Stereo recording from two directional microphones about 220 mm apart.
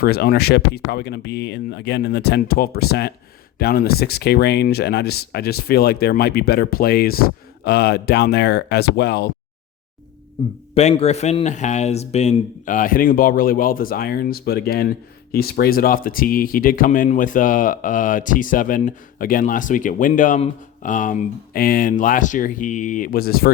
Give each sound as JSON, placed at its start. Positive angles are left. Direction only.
{"t": 0.0, "sound": "speech", "side_deg": 45}
{"t": 10.8, "sound": "speech", "side_deg": 30}